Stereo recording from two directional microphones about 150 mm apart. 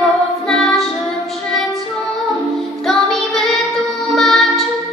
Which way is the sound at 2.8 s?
Centre (ahead or behind).